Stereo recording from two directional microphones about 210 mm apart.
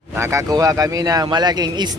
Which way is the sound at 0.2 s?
15° right (ahead or behind).